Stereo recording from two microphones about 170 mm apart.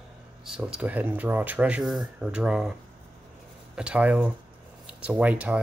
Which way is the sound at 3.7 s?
5° right (ahead or behind).